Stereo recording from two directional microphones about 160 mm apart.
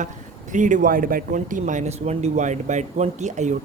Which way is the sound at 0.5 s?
55° right (ahead or behind).